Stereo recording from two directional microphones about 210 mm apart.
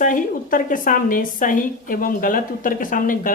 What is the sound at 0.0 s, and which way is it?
A woman's voice, 40° left (ahead or behind).